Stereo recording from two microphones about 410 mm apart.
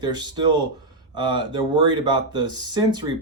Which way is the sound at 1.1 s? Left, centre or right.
Centre.